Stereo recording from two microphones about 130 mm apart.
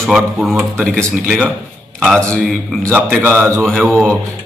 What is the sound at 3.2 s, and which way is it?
Speech, 15° right (ahead or behind).